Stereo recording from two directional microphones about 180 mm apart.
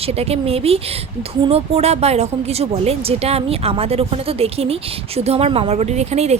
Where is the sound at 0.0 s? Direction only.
35° right (ahead or behind).